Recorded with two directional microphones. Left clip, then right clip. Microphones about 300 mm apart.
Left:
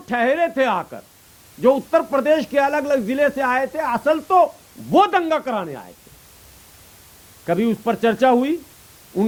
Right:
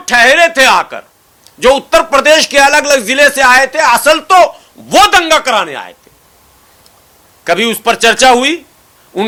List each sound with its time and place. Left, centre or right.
0.0 s a man's voice: centre
4.4 s a child's voice: right
5.0 s a man's voice: centre
7.4 s a man's voice: centre